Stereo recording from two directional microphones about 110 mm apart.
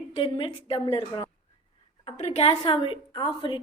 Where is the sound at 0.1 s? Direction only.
50° left (ahead or behind).